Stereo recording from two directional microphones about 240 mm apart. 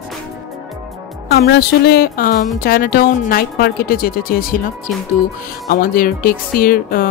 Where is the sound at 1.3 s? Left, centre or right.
Left.